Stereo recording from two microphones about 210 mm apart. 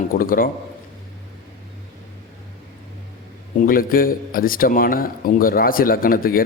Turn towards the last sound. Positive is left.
turn(degrees=45)  # may be behind; listen again after turning